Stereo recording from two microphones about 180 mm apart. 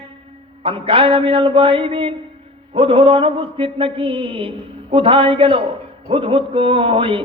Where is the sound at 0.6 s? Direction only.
30° right (ahead or behind).